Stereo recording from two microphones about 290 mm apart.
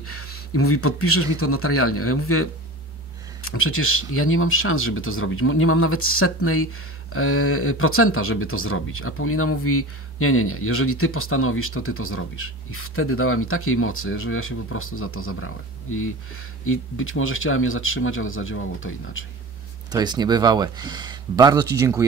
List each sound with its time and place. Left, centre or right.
0.0 s speech: left
3.4 s speech: left
19.9 s speech: centre